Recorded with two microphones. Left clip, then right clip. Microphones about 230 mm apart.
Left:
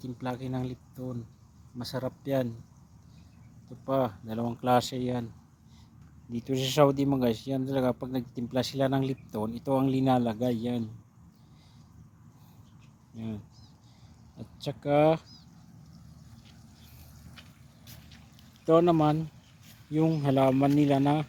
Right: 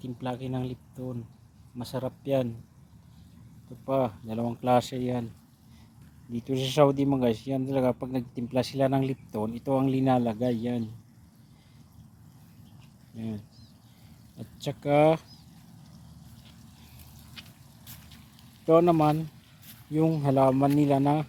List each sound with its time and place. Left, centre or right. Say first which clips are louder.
0.2 s speech: right 1 dB; centre
3.8 s speech: right 1 dB; centre
6.3 s speech: right 1 dB; centre
14.3 s speech: right 2 dB; centre
17.4 s a sound: right 6 dB; right
18.6 s speech: right 2 dB; centre